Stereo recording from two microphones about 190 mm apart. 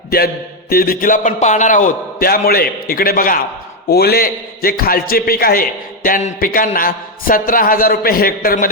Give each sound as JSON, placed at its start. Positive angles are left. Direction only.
{"t": 0.7, "sound": "a man's voice", "side_deg": 50}